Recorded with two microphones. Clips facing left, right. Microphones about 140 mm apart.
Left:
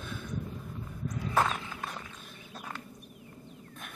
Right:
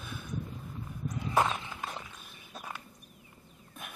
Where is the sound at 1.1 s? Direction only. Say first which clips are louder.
Even; 20° right (ahead or behind).